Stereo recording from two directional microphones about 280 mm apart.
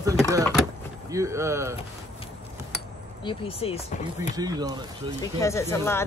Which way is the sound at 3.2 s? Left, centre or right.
Centre.